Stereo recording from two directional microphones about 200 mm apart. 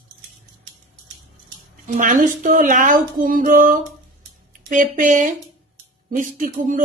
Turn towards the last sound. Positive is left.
turn(degrees=-40)  # may be behind; listen again after turning